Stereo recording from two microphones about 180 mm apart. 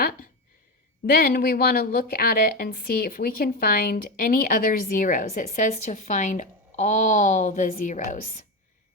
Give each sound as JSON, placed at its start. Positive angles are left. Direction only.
{"t": 1.1, "sound": "a woman's voice", "side_deg": 55}